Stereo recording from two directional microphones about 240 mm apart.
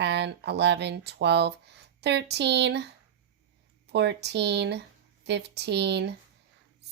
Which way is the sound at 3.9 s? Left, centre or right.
Right.